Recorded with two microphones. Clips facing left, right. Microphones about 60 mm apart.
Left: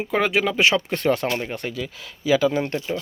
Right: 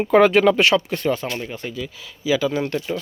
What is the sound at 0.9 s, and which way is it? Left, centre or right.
Speech, left.